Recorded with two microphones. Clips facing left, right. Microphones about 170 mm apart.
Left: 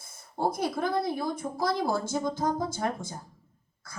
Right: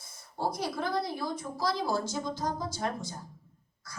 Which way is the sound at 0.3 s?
50° left (ahead or behind).